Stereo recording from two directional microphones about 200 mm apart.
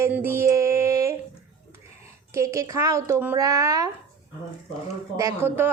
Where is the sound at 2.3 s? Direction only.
15° right (ahead or behind).